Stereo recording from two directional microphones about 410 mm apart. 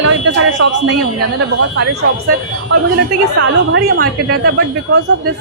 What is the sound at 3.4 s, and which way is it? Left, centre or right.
A woman's voice, right.